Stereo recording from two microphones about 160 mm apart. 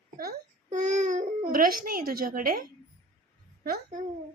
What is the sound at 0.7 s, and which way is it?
Speech, 45° right (ahead or behind).